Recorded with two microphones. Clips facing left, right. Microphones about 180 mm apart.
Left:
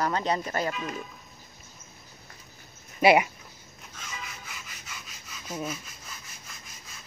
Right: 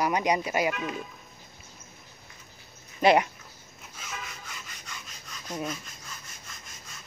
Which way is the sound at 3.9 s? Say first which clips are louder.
Right 1 dB; 5° right (ahead or behind).